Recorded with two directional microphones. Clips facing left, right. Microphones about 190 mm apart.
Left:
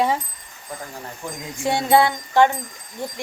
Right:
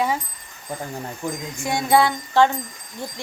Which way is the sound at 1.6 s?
25° left (ahead or behind).